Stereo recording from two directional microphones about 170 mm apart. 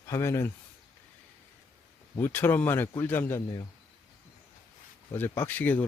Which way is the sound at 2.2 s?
10° left (ahead or behind).